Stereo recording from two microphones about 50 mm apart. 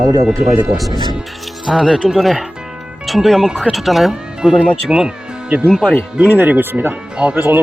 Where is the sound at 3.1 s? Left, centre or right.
Centre.